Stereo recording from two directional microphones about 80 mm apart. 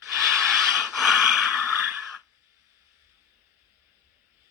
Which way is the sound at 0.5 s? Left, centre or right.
Centre.